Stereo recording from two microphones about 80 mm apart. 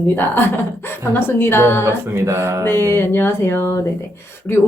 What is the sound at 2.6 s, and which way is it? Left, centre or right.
A woman's voice, left.